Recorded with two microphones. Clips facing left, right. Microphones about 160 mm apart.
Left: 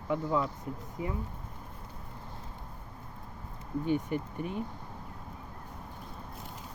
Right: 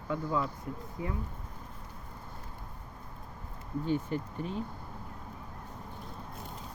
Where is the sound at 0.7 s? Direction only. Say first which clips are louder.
Even; 20° left (ahead or behind).